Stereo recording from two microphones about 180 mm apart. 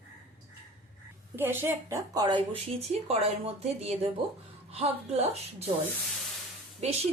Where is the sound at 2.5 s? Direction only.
35° right (ahead or behind).